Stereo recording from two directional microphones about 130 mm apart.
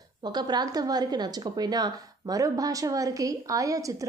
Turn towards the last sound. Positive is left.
turn(degrees=-25)  # may be behind; listen again after turning